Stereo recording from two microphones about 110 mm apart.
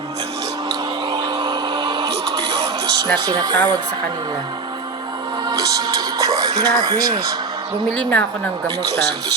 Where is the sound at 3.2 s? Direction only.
40° right (ahead or behind).